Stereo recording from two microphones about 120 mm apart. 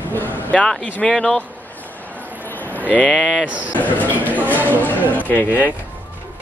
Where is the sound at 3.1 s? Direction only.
Centre (ahead or behind).